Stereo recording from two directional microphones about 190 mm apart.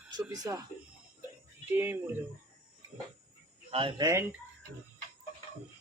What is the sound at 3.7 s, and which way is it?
Speech, 30° right (ahead or behind).